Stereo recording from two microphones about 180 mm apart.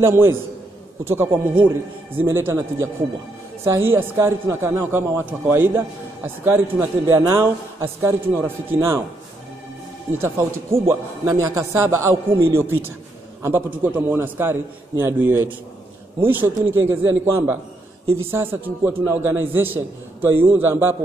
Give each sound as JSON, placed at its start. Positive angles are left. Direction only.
{"t": 0.0, "sound": "a man's voice", "side_deg": -15}
{"t": 10.1, "sound": "a man's voice", "side_deg": -15}